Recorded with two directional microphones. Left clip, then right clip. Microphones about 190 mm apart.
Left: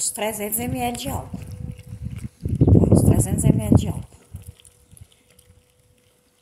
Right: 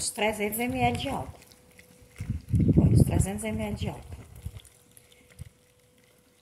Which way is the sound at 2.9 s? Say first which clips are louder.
Left 9 dB; 35° left (ahead or behind).